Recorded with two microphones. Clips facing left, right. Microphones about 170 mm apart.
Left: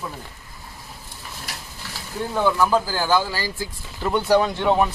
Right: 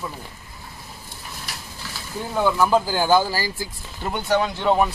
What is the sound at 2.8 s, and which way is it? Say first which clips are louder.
Speech: right 3 dB; 25° right (ahead or behind).